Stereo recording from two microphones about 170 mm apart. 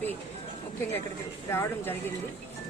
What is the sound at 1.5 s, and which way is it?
Speech, 15° left (ahead or behind).